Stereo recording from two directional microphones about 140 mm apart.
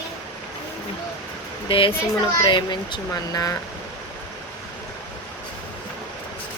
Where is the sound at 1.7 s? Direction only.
40° left (ahead or behind); by 3.6 s 25° left (ahead or behind).